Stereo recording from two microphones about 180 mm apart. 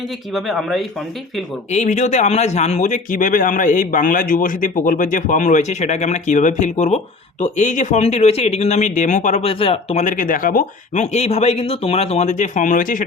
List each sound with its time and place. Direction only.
0.3 s speech: centre (ahead or behind)
1.7 s speech: 40° left (ahead or behind)